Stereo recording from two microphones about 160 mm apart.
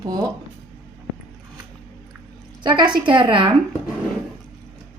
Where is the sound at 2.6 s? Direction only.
30° right (ahead or behind).